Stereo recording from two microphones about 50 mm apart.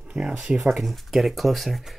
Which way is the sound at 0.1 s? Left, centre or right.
Centre.